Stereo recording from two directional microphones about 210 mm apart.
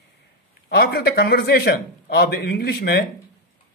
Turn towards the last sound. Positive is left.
turn(degrees=50)  # may be behind; listen again after turning